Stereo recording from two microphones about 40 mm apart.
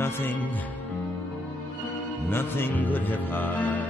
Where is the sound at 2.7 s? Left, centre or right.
Left.